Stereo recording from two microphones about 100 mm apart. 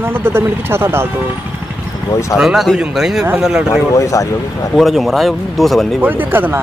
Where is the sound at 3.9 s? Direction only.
30° left (ahead or behind).